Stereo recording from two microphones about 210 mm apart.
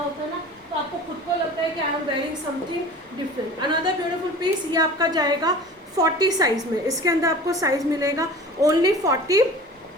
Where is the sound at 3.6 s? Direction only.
20° right (ahead or behind).